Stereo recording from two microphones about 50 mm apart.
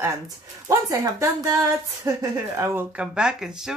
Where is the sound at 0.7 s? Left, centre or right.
Right.